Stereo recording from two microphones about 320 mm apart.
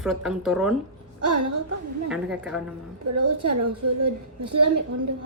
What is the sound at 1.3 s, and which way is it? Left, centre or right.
Speech, right.